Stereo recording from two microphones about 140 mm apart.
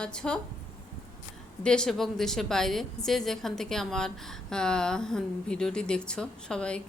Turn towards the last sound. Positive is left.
turn(degrees=5)  # may be behind; listen again after turning